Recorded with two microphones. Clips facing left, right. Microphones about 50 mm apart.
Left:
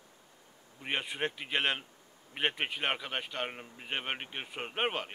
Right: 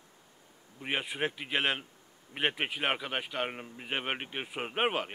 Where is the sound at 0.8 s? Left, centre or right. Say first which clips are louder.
Right 1 dB; centre.